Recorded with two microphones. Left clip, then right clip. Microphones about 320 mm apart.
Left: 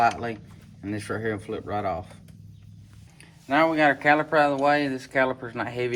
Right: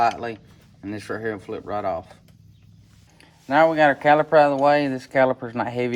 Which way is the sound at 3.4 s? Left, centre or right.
Right.